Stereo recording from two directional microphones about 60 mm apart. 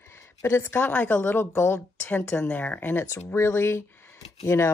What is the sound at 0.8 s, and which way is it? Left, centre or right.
Speech, left.